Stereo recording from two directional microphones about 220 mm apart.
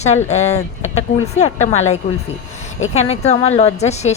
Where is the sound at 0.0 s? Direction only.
30° left (ahead or behind).